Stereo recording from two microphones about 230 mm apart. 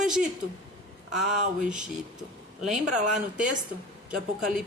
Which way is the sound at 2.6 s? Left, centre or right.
Centre.